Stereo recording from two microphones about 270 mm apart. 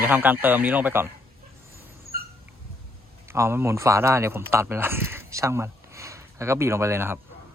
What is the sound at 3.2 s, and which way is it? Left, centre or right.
Speech, centre.